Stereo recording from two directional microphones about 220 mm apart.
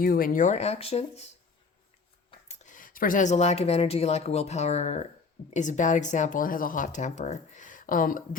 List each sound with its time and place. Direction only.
0.0 s speech: 40° left (ahead or behind)
2.5 s speech: 35° left (ahead or behind)